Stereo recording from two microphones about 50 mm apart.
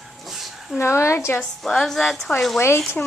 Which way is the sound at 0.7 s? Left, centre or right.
Left.